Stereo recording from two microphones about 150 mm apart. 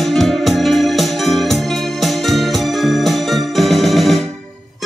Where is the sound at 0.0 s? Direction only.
Centre (ahead or behind).